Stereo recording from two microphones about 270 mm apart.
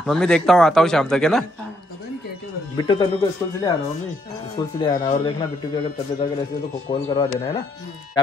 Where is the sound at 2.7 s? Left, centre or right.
Centre.